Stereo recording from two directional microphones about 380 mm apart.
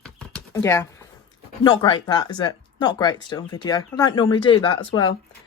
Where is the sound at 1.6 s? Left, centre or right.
Centre.